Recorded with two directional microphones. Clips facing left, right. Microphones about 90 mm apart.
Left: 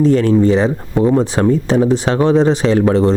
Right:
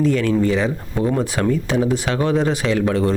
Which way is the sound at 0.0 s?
35° left (ahead or behind).